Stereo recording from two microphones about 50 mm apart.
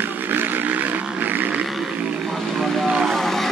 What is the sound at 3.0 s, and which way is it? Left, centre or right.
Vehicle, centre.